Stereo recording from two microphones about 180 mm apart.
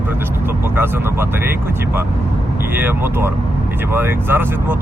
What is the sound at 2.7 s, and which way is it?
Speech, 10° right (ahead or behind).